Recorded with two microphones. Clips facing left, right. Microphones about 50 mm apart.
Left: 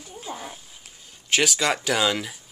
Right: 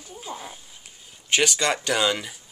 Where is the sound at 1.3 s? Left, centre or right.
Centre.